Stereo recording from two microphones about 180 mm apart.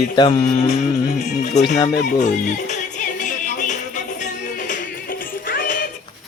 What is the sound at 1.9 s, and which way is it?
Music, 40° left (ahead or behind).